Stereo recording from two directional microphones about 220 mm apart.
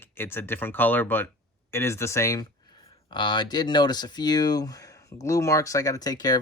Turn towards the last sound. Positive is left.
turn(degrees=15)  # may be behind; listen again after turning